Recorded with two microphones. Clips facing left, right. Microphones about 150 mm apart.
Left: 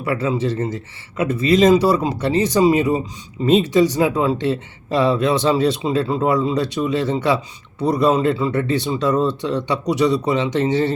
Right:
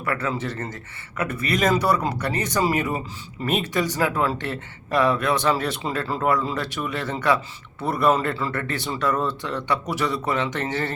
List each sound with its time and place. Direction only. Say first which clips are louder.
0.0 s speech: left 6 dB; 20° left (ahead or behind)